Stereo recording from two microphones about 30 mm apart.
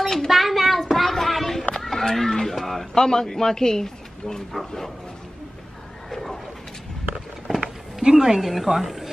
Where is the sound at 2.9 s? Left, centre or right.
Left.